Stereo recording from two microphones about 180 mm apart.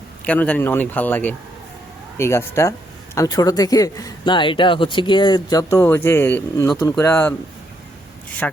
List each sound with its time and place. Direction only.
0.3 s speech: 10° left (ahead or behind)